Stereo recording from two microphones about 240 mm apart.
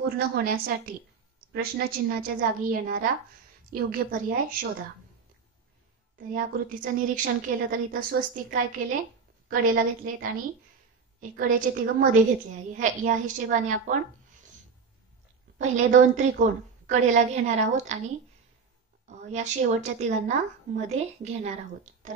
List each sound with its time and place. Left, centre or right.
0.0 s a woman's voice: right
6.1 s a woman's voice: right
15.6 s a woman's voice: right